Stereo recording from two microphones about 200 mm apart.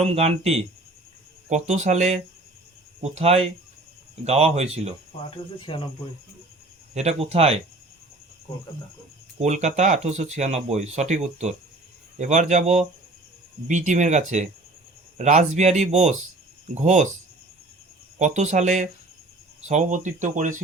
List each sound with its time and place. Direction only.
0.0 s speech: 30° right (ahead or behind)
5.5 s speech: 25° left (ahead or behind)
6.9 s speech: 35° right (ahead or behind)
9.4 s speech: 35° right (ahead or behind)
18.2 s speech: 35° right (ahead or behind)